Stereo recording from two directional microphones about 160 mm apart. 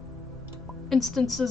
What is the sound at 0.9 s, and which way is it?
Speech, centre (ahead or behind).